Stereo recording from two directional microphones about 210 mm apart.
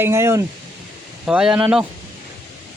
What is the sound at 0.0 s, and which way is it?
Speech, 10° right (ahead or behind).